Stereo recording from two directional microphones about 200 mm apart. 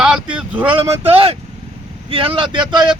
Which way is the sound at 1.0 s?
30° right (ahead or behind).